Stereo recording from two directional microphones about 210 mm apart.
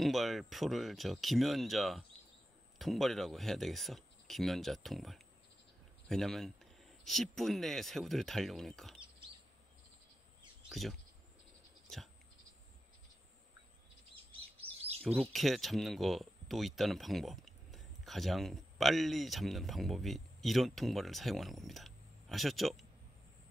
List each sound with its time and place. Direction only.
0.0 s speech: centre (ahead or behind)
10.7 s speech: centre (ahead or behind)
14.1 s chirp: 25° right (ahead or behind)
15.0 s speech: 5° right (ahead or behind)